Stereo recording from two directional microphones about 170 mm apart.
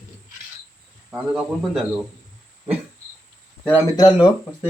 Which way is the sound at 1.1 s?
5° right (ahead or behind).